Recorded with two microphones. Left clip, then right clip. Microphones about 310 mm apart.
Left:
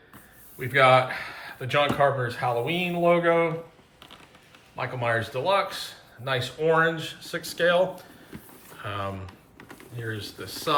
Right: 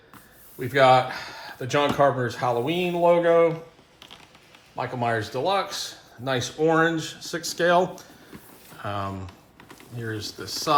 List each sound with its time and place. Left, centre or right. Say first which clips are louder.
0.6 s speech: right 1 dB; centre
4.8 s speech: right 1 dB; centre
8.8 s speech: right 2 dB; centre
9.6 s a sound: left 2 dB; centre
10.0 s speech: right 2 dB; centre